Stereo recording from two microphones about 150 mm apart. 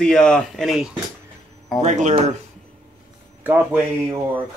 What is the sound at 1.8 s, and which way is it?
Speech, 55° right (ahead or behind).